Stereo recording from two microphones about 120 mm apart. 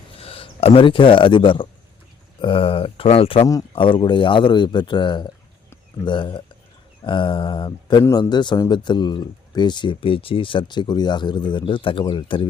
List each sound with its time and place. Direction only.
0.2 s speech: 50° left (ahead or behind)